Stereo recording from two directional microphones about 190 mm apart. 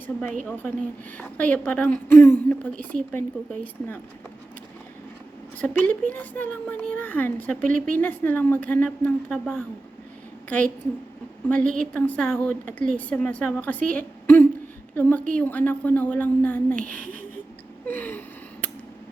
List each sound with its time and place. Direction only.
0.4 s a woman's voice: 10° left (ahead or behind)
5.5 s a woman's voice: 5° left (ahead or behind)
11.4 s a woman's voice: 5° left (ahead or behind)
16.8 s speech: 45° right (ahead or behind)
17.8 s a woman's voice: 10° left (ahead or behind)